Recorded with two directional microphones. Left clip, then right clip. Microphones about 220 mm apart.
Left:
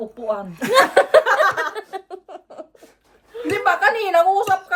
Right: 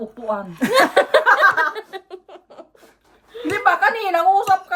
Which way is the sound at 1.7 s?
5° left (ahead or behind).